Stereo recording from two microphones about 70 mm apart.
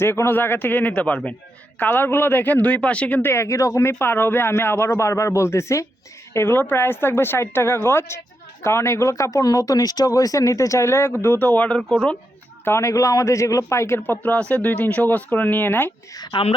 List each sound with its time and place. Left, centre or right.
0.0 s speech: left
1.8 s speech: left
3.2 s speech: left
3.4 s speech: left
11.8 s speech: centre
12.6 s speech: left